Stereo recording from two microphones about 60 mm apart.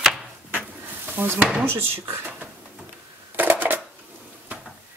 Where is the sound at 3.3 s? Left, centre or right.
Right.